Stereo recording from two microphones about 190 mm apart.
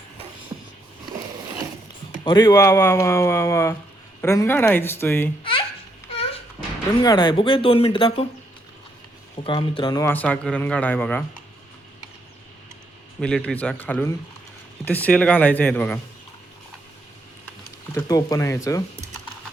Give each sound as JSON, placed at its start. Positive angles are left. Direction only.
{"t": 2.2, "sound": "a man's voice", "side_deg": 20}
{"t": 5.4, "sound": "baby laughter", "side_deg": 30}
{"t": 6.1, "sound": "a sound", "side_deg": 30}
{"t": 7.0, "sound": "speech", "side_deg": 20}
{"t": 9.4, "sound": "a man's voice", "side_deg": 30}
{"t": 13.1, "sound": "a man's voice", "side_deg": 5}
{"t": 17.9, "sound": "a man's voice", "side_deg": 15}